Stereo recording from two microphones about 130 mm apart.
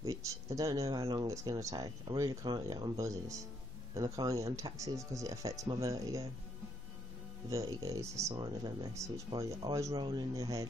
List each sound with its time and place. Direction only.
0.0 s speech: 25° right (ahead or behind)
7.4 s speech: 25° right (ahead or behind)